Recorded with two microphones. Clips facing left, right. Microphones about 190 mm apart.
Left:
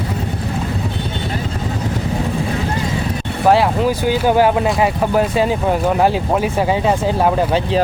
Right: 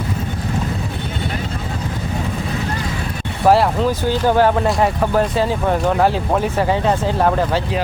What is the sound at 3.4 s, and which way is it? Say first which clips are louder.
Speech: even; centre (ahead or behind).